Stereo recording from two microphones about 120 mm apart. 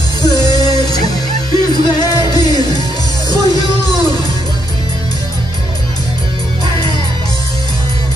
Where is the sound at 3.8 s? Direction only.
35° left (ahead or behind).